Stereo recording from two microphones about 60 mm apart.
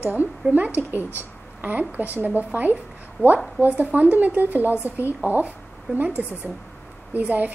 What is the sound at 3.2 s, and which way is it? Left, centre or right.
Speech, left.